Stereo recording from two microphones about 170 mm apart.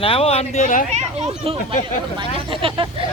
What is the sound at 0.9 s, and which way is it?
Speech, 40° right (ahead or behind).